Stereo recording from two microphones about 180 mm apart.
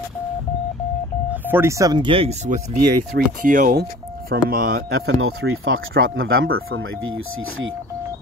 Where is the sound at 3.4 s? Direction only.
45° right (ahead or behind).